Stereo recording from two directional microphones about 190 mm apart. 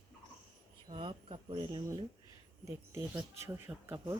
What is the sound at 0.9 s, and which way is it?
Speech, 25° right (ahead or behind).